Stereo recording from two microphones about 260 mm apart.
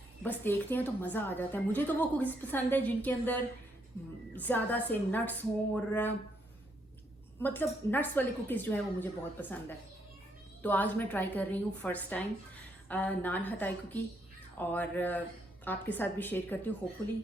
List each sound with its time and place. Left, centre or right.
0.2 s a woman's voice: centre
7.3 s a woman's voice: centre